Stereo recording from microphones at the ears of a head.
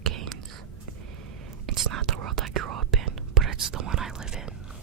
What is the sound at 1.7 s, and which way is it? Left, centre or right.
Whispering, right.